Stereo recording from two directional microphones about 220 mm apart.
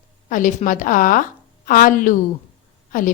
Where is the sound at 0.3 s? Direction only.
35° left (ahead or behind).